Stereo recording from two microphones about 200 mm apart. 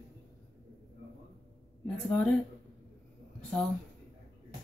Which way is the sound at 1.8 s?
5° left (ahead or behind).